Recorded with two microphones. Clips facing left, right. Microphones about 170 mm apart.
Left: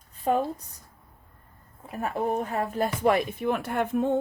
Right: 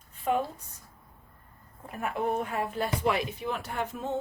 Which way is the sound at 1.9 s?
40° left (ahead or behind).